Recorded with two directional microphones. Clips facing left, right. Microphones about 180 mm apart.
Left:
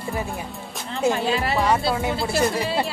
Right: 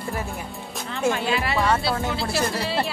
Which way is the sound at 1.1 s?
40° left (ahead or behind).